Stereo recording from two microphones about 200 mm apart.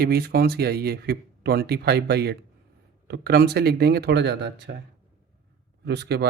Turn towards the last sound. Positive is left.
turn(degrees=-55)  # may be behind; listen again after turning